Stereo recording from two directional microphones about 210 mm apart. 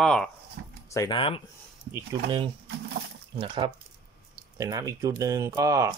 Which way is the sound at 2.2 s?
25° right (ahead or behind).